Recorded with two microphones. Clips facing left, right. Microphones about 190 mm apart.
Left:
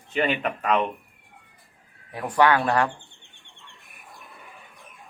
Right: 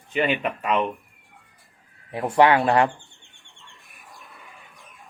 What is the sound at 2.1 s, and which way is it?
Speech, 25° right (ahead or behind).